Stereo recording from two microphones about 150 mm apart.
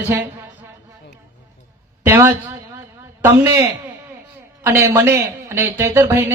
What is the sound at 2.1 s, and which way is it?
A man's voice, 15° right (ahead or behind).